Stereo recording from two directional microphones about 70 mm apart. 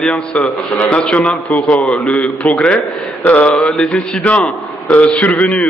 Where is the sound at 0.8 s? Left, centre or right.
Centre.